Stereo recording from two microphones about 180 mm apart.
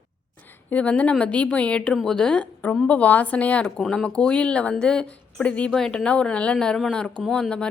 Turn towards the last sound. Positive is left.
turn(degrees=5)  # may be behind; listen again after turning